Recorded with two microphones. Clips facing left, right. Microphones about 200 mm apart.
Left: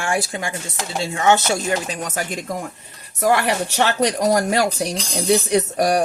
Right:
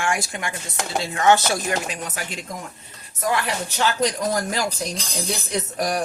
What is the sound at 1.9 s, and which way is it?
Speech, 45° left (ahead or behind).